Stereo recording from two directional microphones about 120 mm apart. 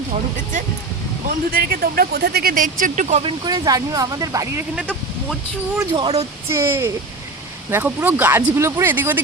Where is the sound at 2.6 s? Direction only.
90° right.